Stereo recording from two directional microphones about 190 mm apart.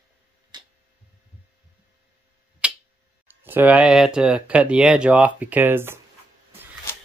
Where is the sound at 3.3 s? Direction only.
10° right (ahead or behind).